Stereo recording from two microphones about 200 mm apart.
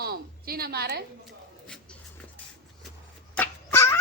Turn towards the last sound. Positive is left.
turn(degrees=10)  # may be behind; listen again after turning